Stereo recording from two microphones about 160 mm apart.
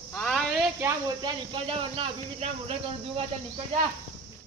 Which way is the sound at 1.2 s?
30° right (ahead or behind).